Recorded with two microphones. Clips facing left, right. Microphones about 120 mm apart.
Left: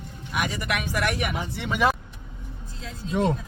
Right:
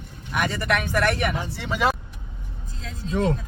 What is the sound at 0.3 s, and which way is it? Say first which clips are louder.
Speech: right 4 dB; 10° left (ahead or behind).